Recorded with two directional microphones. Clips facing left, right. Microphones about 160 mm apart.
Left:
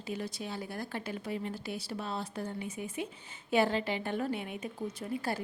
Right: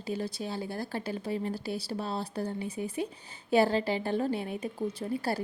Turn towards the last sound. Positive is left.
turn(degrees=-35)  # may be behind; listen again after turning